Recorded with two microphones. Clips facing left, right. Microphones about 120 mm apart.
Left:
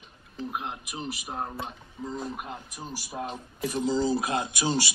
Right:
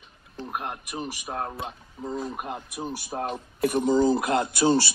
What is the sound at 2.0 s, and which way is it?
Speech, 5° right (ahead or behind).